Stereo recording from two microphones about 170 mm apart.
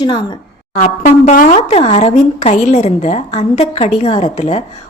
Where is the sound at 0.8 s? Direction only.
45° left (ahead or behind).